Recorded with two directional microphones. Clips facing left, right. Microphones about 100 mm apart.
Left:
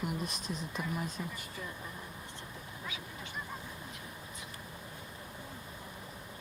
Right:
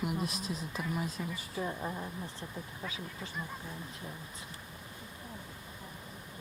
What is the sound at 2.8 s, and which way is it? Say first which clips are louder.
Speech: right 1 dB; 35° right (ahead or behind).